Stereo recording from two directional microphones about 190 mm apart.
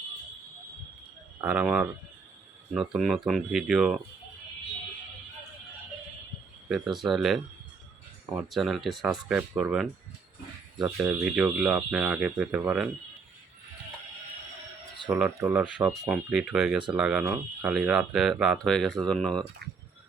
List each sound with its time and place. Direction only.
1.4 s speech: 5° right (ahead or behind)
6.7 s speech: centre (ahead or behind)
10.9 s speech: 10° right (ahead or behind)
15.4 s speech: 10° right (ahead or behind)
16.0 s speech: 5° right (ahead or behind)